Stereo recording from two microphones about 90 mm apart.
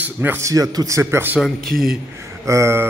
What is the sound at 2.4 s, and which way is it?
Speech, 35° right (ahead or behind).